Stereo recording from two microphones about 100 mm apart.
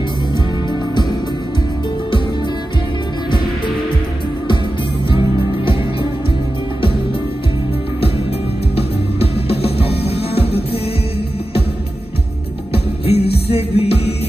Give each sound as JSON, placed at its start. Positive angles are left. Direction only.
{"t": 3.3, "sound": "music", "side_deg": 55}
{"t": 8.7, "sound": "music", "side_deg": 85}
{"t": 12.7, "sound": "music", "side_deg": 80}